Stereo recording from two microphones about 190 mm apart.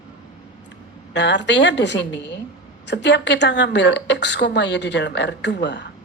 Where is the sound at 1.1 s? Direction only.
65° left (ahead or behind).